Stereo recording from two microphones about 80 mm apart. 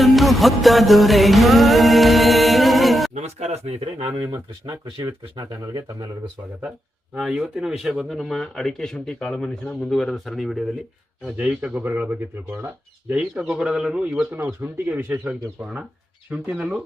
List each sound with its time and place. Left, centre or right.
0.0 s music: centre
4.6 s speech: right
5.0 s speech: right
6.6 s speech: centre
11.3 s speech: centre
13.5 s a man's voice: centre
14.6 s speech: right
16.5 s a man's voice: centre